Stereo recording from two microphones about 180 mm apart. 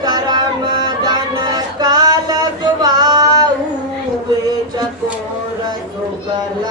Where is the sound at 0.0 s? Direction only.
25° right (ahead or behind).